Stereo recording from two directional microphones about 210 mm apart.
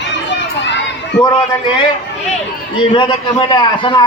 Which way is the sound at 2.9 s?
20° left (ahead or behind).